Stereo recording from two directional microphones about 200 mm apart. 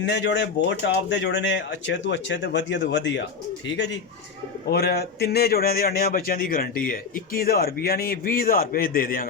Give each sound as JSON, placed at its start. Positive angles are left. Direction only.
{"t": 0.0, "sound": "speech", "side_deg": 60}
{"t": 4.7, "sound": "a man's voice", "side_deg": 55}